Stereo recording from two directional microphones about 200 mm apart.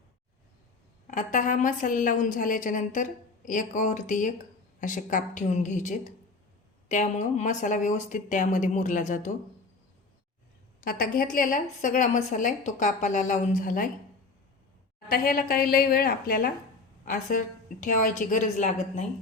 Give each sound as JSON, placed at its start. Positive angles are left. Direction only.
{"t": 1.0, "sound": "a woman's voice", "side_deg": 40}
{"t": 10.8, "sound": "a woman's voice", "side_deg": 50}
{"t": 15.1, "sound": "a woman's voice", "side_deg": 45}